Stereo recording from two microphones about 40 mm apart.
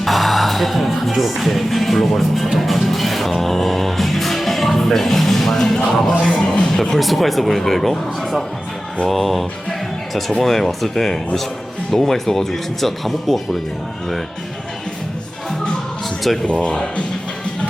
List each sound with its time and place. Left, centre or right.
0.0 s music: centre
6.3 s speech: left; by 9.4 s centre
10.4 s speech: centre
16.5 s speech: left